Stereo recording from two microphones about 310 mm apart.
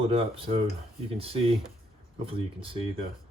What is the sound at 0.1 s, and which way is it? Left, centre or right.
Speech, centre.